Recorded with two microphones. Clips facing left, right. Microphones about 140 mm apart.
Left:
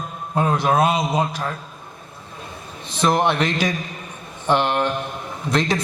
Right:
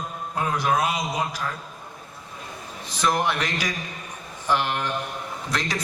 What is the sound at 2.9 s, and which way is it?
A man's voice, 25° left (ahead or behind).